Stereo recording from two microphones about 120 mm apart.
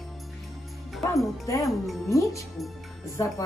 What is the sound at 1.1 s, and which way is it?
Speech, 25° left (ahead or behind).